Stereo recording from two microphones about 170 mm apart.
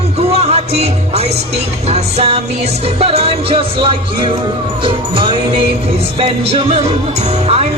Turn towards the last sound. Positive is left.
turn(degrees=-40)  # may be behind; listen again after turning